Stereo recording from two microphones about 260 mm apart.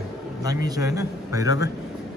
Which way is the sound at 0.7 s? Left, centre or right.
Centre.